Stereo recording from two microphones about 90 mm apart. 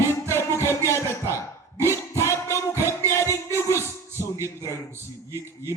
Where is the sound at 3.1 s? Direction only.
30° left (ahead or behind).